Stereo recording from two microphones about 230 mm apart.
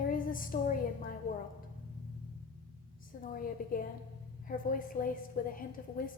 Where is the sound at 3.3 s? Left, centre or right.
Left.